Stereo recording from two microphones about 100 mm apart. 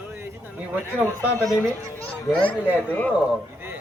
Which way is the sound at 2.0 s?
15° left (ahead or behind).